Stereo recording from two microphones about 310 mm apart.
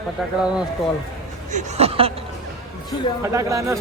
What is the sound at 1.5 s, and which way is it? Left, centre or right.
Speech, right.